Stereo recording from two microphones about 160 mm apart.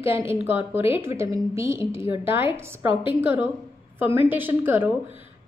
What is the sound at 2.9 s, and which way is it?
Speech, 30° left (ahead or behind).